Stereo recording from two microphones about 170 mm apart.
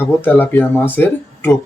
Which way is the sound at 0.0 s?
10° left (ahead or behind).